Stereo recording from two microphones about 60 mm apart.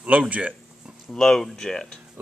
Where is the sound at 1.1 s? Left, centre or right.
Centre.